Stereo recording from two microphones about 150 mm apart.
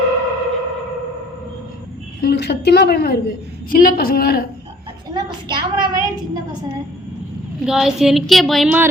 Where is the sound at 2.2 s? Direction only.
90° left.